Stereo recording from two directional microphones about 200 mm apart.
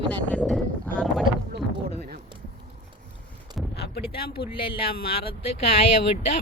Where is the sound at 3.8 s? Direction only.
50° left (ahead or behind).